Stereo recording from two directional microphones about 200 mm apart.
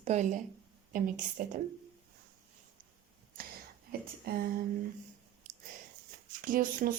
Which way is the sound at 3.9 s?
50° right (ahead or behind).